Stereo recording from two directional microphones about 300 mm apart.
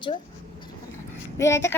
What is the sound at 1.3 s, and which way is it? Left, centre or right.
Speech, centre.